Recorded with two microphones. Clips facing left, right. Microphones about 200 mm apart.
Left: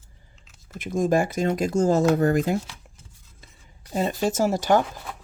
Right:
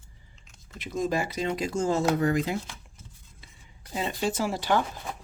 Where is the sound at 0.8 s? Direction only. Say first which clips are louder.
Left 6 dB; 50° left (ahead or behind).